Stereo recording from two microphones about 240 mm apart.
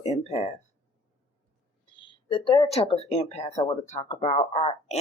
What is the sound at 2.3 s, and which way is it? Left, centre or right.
Speech, left.